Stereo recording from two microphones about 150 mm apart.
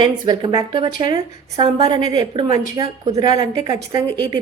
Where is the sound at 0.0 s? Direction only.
30° right (ahead or behind).